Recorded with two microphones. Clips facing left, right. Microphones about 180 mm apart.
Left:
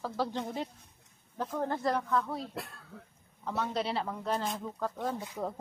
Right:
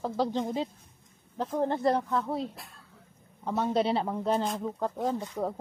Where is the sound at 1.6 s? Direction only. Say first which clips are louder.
Right 5 dB; 25° right (ahead or behind).